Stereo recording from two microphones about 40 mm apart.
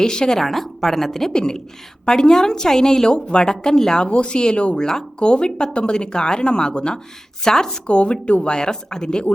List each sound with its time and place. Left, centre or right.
0.0 s a woman's voice: centre
0.4 s a woman's voice: centre
1.3 s a woman's voice: centre
3.2 s a woman's voice: left
7.9 s a woman's voice: left